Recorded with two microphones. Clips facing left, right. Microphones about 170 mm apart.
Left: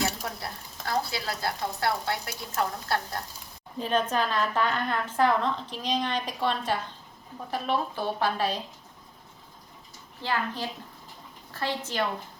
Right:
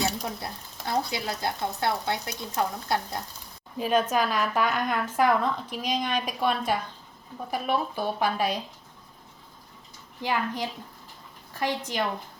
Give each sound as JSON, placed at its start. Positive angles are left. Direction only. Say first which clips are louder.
{"t": 0.0, "sound": "a woman's voice", "louder": "right 1 dB", "side_deg": -20}
{"t": 10.2, "sound": "a woman's voice", "louder": "right 2 dB", "side_deg": -15}